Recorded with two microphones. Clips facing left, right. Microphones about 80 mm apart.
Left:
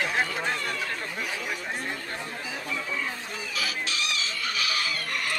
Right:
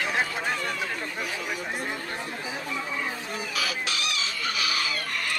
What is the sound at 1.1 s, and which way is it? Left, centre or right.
Speech, centre.